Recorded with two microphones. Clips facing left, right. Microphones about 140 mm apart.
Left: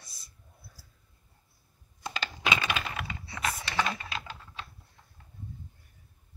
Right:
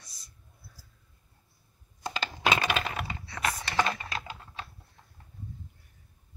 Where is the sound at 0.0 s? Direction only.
15° right (ahead or behind).